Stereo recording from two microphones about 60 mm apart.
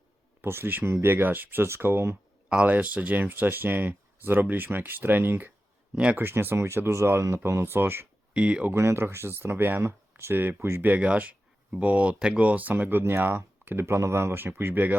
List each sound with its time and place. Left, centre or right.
0.4 s speech: right
2.6 s speech: right
5.9 s speech: centre
6.1 s speech: right
8.3 s speech: centre
8.7 s speech: right
10.8 s speech: right